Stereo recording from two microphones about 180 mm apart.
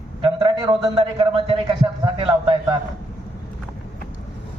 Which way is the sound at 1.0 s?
30° right (ahead or behind).